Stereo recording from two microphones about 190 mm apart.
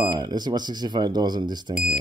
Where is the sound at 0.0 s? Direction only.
20° right (ahead or behind).